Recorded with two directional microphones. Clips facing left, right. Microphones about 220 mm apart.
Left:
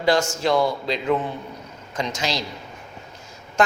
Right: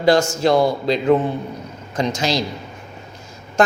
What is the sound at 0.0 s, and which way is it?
A man's voice, 40° right (ahead or behind).